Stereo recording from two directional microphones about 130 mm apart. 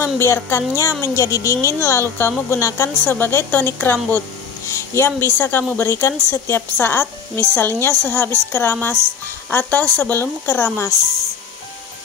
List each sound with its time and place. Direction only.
0.0 s a woman's voice: 20° left (ahead or behind)